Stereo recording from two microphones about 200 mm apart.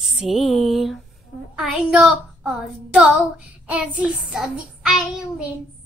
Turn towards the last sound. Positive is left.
turn(degrees=-5)  # may be behind; listen again after turning